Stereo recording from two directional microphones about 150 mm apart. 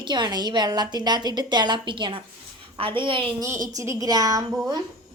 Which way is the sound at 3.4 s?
20° right (ahead or behind).